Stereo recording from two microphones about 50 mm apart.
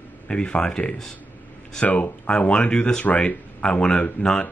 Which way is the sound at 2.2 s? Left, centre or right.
Left.